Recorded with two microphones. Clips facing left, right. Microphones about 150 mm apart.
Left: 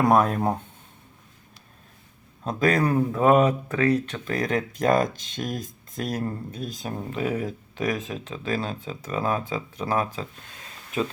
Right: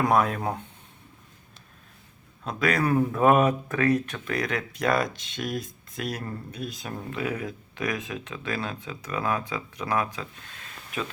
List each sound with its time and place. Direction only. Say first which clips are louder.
0.1 s speech: left 3 dB; 40° left (ahead or behind)
2.4 s a man's voice: left 3 dB; 40° left (ahead or behind)
2.9 s speech: right 1 dB; 25° left (ahead or behind); by 6.9 s 40° left (ahead or behind)
7.1 s speech: left 3 dB; 30° left (ahead or behind)